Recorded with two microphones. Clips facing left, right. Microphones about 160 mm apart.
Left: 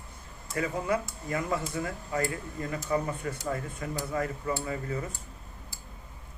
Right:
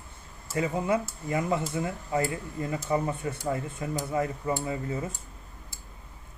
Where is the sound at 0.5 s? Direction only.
25° right (ahead or behind).